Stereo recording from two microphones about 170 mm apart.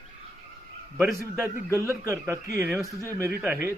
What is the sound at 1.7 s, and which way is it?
A man's voice, 15° right (ahead or behind).